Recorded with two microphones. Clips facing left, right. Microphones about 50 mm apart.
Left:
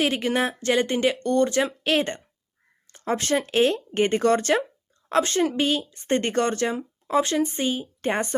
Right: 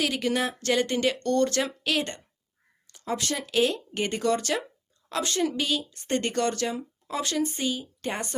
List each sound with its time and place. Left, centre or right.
0.0 s speech: left
1.8 s speech: left